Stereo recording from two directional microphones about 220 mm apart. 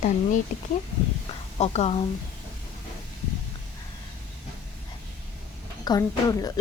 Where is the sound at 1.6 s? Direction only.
30° left (ahead or behind).